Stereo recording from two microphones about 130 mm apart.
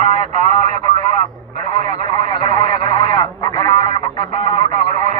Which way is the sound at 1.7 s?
40° left (ahead or behind).